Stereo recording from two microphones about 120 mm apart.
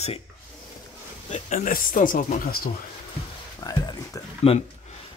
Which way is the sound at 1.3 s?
90° left.